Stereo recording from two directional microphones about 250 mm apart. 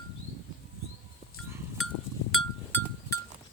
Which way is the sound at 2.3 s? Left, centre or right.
Centre.